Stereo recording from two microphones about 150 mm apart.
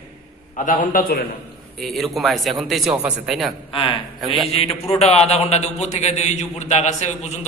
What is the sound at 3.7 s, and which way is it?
A man's voice, 35° left (ahead or behind).